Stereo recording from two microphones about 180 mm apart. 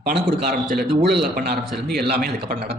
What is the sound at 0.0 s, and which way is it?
Speech, 65° right (ahead or behind).